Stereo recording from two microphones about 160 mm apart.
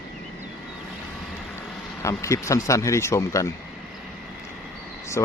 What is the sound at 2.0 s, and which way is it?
Speech, 20° left (ahead or behind).